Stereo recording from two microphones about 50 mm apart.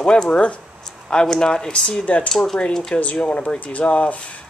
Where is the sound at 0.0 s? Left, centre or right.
Centre.